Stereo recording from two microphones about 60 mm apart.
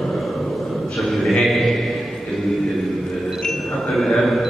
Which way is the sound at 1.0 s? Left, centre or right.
Centre.